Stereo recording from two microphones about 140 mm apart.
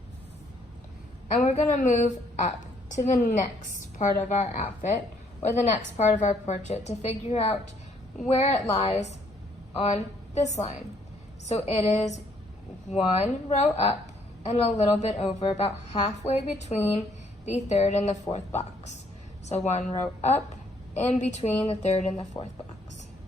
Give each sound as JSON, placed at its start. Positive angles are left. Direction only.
{"t": 1.4, "sound": "a woman's voice", "side_deg": 60}
{"t": 22.3, "sound": "speech", "side_deg": 25}